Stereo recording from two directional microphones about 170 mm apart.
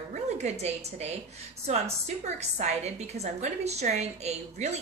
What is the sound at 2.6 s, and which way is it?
A woman's voice, 40° right (ahead or behind).